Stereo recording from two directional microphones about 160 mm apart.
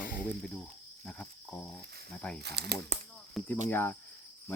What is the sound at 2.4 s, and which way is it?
Speech, 90° right.